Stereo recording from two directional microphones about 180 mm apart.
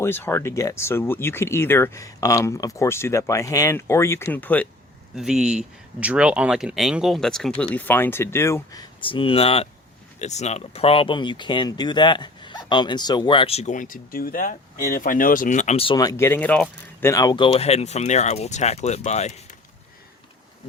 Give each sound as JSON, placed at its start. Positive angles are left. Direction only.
{"t": 0.0, "sound": "speech", "side_deg": 10}
{"t": 5.1, "sound": "speech", "side_deg": 0}